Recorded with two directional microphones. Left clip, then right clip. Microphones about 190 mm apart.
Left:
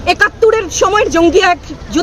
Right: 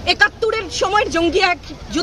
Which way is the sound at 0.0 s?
15° left (ahead or behind).